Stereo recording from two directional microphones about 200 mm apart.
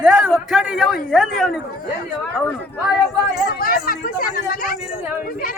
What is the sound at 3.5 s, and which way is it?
Speech, 45° left (ahead or behind).